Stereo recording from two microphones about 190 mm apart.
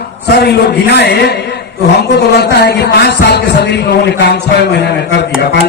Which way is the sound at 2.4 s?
60° left (ahead or behind).